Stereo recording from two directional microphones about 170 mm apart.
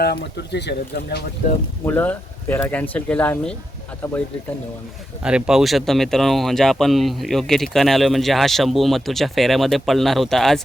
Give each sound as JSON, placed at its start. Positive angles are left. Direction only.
{"t": 0.0, "sound": "speech", "side_deg": 70}
{"t": 1.8, "sound": "speech", "side_deg": 10}
{"t": 5.2, "sound": "speech", "side_deg": -5}